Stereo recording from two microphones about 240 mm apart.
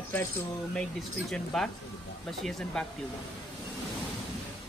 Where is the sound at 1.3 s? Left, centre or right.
Centre.